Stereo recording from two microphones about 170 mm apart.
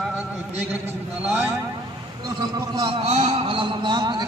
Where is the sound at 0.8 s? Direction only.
15° right (ahead or behind).